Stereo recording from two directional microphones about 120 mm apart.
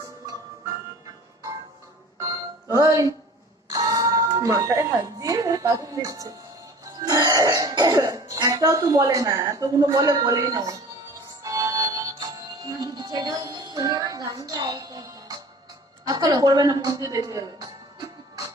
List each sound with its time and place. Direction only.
2.1 s music: 25° right (ahead or behind)
6.8 s speech: 30° right (ahead or behind)
11.4 s music: 25° right (ahead or behind)
12.8 s a woman's voice: 35° right (ahead or behind)